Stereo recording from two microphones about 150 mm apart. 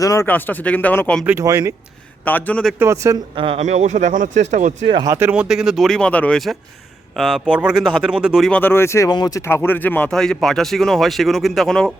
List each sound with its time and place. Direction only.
0.0 s speech: 20° left (ahead or behind)
1.2 s speech: 10° right (ahead or behind)
1.5 s speech: 20° right (ahead or behind)
2.2 s speech: 10° left (ahead or behind)
2.7 s speech: 20° right (ahead or behind)
3.3 s speech: 35° right (ahead or behind)
3.6 s speech: 50° right (ahead or behind)
5.0 s speech: 20° right (ahead or behind)
5.3 s speech: 5° right (ahead or behind)
8.4 s speech: 10° left (ahead or behind)